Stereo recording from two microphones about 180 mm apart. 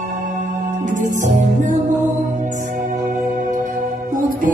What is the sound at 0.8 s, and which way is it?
Music, 45° right (ahead or behind).